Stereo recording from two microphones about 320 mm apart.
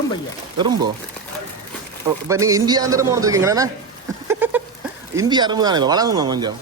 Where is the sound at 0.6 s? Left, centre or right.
Centre.